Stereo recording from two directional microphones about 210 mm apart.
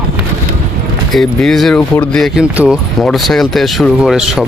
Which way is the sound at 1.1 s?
Centre (ahead or behind).